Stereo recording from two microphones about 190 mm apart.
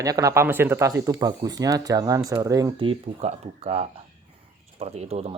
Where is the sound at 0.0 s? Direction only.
15° right (ahead or behind).